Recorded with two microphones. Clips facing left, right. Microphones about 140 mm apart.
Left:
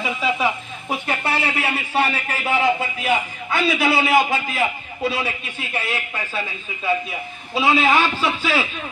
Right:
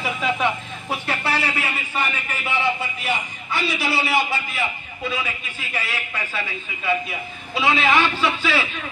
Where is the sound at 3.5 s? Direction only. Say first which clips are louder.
Left 5 dB; 50° left (ahead or behind).